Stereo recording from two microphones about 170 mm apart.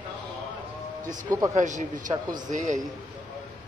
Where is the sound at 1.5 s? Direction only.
45° right (ahead or behind).